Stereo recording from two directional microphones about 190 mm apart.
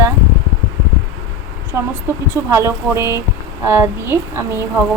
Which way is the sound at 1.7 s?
10° right (ahead or behind).